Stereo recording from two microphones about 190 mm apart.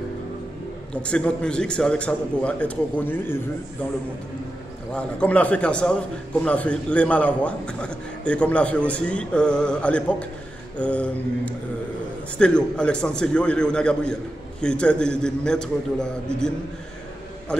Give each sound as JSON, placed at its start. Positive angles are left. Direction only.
{"t": 1.0, "sound": "a man's voice", "side_deg": 5}
{"t": 4.9, "sound": "a man's voice", "side_deg": 5}
{"t": 17.5, "sound": "a sound", "side_deg": 5}